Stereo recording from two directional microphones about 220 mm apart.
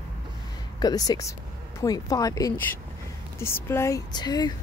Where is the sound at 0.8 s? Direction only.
15° left (ahead or behind).